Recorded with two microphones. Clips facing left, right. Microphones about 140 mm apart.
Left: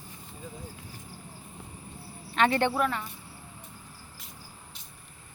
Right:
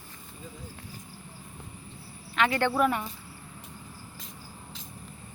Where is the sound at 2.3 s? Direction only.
40° left (ahead or behind).